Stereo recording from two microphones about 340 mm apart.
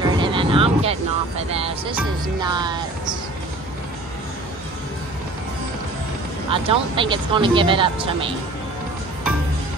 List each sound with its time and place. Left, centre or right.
0.0 s music: centre
1.5 s speech: centre
6.5 s speech: centre